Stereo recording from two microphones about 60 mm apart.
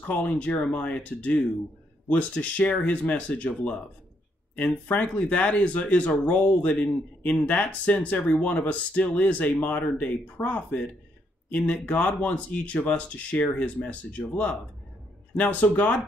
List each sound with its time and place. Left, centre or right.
0.0 s speech: left